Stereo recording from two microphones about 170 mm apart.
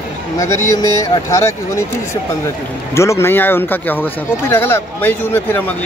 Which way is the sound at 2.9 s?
15° left (ahead or behind).